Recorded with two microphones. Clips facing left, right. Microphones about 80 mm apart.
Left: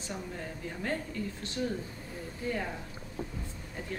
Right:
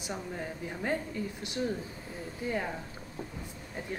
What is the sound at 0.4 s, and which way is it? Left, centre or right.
A woman's voice, centre.